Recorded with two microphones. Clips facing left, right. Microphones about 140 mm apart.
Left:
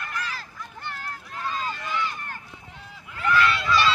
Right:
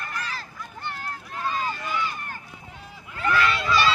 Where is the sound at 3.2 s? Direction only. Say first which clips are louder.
Left 1 dB; 20° right (ahead or behind).